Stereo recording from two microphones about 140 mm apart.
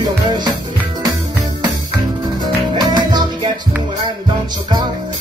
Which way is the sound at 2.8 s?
30° right (ahead or behind).